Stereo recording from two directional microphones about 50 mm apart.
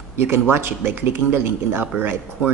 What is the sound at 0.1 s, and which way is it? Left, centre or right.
Speech, right.